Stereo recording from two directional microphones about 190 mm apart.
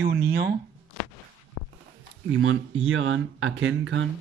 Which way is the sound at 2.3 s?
90° right.